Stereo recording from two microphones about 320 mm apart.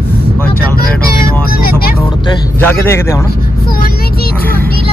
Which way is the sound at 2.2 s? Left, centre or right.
Centre.